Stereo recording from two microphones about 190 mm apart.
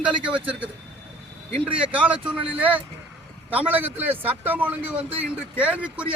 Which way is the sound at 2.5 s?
10° right (ahead or behind).